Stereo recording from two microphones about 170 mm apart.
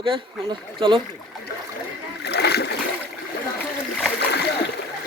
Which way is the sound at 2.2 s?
75° left (ahead or behind).